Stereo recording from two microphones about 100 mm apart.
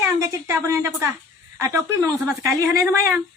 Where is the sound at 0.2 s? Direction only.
30° right (ahead or behind).